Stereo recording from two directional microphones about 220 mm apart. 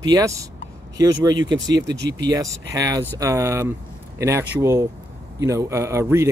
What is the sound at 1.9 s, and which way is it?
Speech, 50° right (ahead or behind).